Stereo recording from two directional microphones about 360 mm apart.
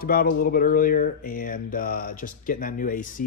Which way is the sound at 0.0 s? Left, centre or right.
Left.